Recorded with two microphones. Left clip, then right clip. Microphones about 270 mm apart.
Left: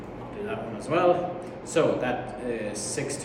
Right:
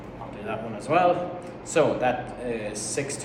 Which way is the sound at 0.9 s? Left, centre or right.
Centre.